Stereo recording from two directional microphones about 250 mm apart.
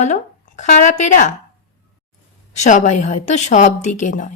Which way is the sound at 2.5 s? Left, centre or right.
Left.